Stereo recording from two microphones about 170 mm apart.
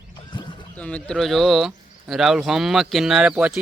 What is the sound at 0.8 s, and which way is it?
Speech, 5° left (ahead or behind).